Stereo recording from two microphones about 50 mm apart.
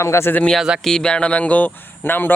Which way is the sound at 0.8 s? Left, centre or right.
Centre.